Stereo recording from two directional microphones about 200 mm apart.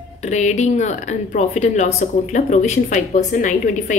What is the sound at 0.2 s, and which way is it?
A woman's voice, 35° left (ahead or behind).